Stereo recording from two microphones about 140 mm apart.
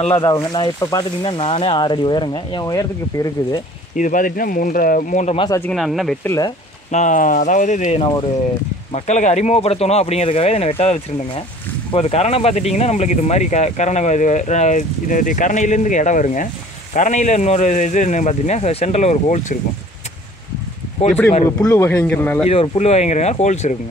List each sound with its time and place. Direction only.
0.5 s speech: 30° left (ahead or behind)
3.9 s speech: 70° left (ahead or behind)
5.7 s speech: centre (ahead or behind)
6.2 s speech: 25° left (ahead or behind)
6.9 s speech: 60° left (ahead or behind)
21.5 s speech: 20° left (ahead or behind)
22.4 s speech: 45° left (ahead or behind)